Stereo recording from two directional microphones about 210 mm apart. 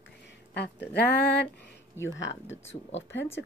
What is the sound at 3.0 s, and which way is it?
Speech, 60° left (ahead or behind).